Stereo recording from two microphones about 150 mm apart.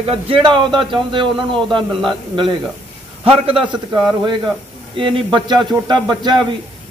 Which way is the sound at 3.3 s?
40° right (ahead or behind).